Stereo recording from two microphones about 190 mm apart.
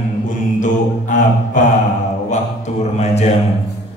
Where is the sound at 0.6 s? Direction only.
40° left (ahead or behind).